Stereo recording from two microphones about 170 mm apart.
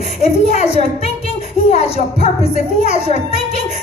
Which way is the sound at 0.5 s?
40° left (ahead or behind).